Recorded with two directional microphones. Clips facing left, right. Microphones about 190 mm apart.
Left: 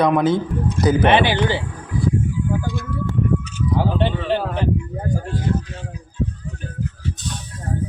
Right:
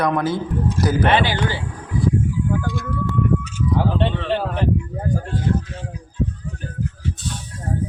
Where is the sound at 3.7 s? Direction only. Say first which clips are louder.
Left 1 dB; 5° left (ahead or behind).